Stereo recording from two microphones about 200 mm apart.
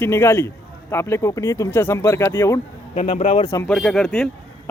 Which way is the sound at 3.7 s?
Centre (ahead or behind).